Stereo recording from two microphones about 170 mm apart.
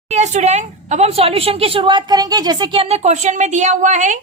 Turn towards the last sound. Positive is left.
turn(degrees=-45)  # may be behind; listen again after turning